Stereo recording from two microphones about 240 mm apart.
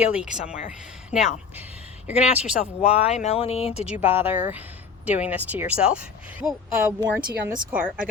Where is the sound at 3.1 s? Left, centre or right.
Left.